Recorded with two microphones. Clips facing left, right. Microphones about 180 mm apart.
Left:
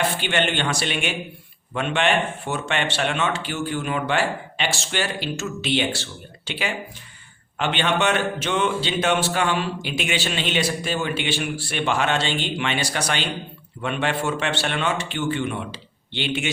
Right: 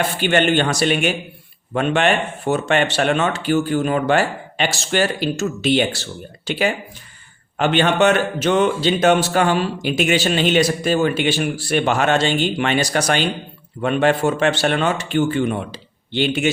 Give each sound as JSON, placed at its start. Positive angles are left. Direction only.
{"t": 0.2, "sound": "a man's voice", "side_deg": -45}